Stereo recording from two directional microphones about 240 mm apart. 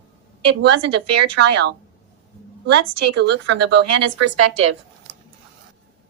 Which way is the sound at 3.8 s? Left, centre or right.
Right.